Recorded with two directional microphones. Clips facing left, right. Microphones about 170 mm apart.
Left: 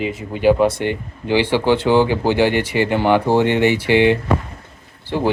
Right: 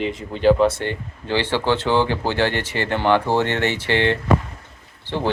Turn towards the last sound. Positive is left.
turn(degrees=10)  # may be behind; listen again after turning